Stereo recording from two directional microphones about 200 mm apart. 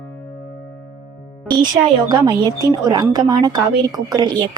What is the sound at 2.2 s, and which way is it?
Speech, 20° right (ahead or behind).